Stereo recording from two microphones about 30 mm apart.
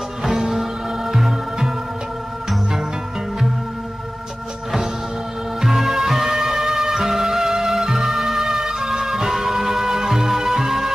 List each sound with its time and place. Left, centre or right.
0.2 s music: centre
5.6 s music: centre